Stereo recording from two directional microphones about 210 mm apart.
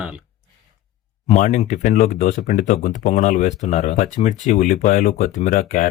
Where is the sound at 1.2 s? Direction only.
35° left (ahead or behind).